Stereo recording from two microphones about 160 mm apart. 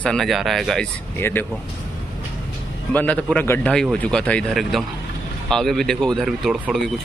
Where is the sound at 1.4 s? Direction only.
15° left (ahead or behind).